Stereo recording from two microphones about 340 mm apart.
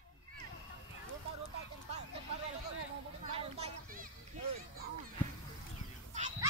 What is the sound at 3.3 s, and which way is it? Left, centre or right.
Children playing, centre.